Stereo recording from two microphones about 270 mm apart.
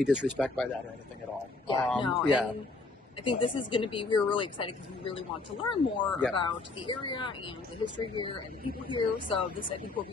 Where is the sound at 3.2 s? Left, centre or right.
Centre.